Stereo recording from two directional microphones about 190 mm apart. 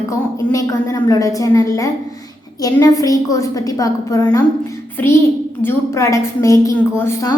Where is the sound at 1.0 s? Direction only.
15° left (ahead or behind).